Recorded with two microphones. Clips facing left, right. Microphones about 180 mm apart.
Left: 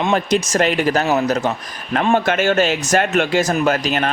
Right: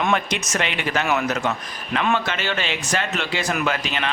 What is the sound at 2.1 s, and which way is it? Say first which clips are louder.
Speech: left 8 dB; 50° left (ahead or behind).